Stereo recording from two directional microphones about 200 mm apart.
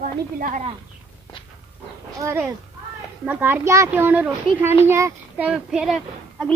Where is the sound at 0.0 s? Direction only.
45° right (ahead or behind).